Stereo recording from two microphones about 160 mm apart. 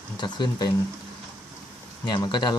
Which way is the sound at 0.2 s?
30° left (ahead or behind).